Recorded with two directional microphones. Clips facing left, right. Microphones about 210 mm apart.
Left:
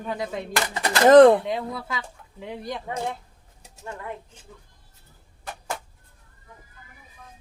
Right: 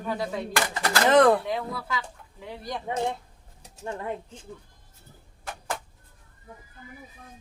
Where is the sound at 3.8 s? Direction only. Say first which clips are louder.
Right 3 dB; 25° right (ahead or behind).